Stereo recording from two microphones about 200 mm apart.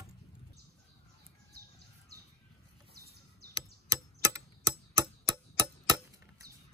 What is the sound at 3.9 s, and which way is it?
Typewriter, 15° right (ahead or behind).